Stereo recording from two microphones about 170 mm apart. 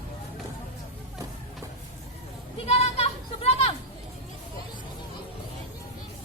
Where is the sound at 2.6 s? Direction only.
40° left (ahead or behind).